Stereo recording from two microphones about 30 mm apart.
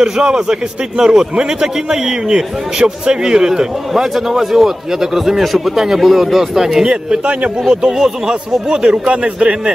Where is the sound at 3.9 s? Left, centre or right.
Centre.